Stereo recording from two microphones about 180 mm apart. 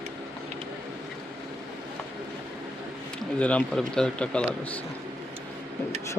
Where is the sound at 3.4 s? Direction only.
5° left (ahead or behind).